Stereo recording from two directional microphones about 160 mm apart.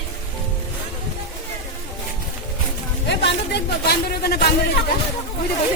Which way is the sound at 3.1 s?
90° left.